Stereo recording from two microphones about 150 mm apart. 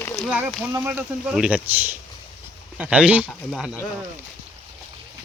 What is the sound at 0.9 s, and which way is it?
Speech, 5° right (ahead or behind).